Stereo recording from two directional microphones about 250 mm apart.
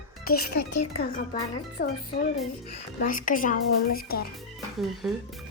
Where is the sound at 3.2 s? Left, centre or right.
Left.